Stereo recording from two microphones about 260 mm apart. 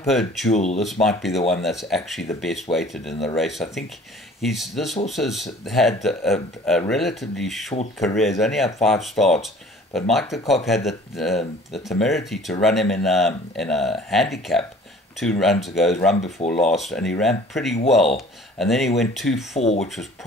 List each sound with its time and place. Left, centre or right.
0.0 s speech: centre
0.5 s speech: left
0.7 s speech: centre
16.2 s speech: left
16.4 s speech: centre
19.5 s speech: left